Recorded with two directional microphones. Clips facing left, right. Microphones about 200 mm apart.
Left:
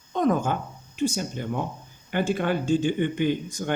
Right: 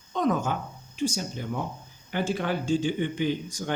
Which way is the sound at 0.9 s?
55° left (ahead or behind).